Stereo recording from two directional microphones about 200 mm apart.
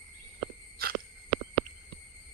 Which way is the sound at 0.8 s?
50° right (ahead or behind).